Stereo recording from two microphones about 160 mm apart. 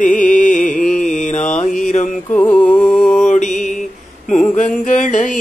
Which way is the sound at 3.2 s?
50° left (ahead or behind).